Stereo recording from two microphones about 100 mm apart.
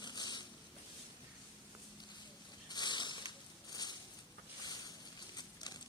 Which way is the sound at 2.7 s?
45° left (ahead or behind).